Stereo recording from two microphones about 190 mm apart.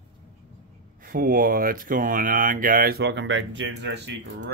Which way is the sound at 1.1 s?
50° right (ahead or behind).